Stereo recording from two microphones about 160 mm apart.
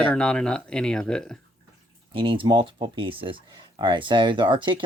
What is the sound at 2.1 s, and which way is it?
Speech, 30° right (ahead or behind).